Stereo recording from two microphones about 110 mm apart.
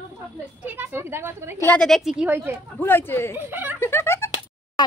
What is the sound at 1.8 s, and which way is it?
Speech, centre (ahead or behind).